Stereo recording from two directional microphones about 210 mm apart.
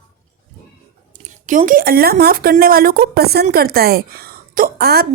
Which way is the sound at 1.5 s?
40° right (ahead or behind).